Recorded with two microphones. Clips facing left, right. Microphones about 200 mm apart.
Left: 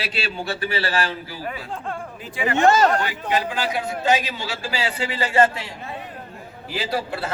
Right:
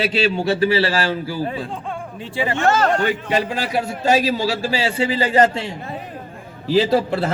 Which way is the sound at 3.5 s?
40° right (ahead or behind).